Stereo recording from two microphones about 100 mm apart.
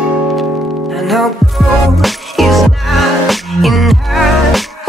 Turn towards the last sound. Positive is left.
turn(degrees=0)  # may be behind; listen again after turning